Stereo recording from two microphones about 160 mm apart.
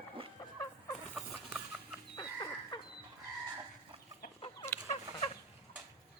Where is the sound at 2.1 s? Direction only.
25° left (ahead or behind).